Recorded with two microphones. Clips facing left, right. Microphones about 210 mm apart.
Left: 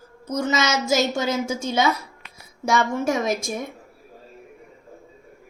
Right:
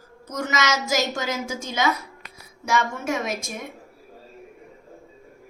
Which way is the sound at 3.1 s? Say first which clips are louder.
Left 2 dB; 35° left (ahead or behind).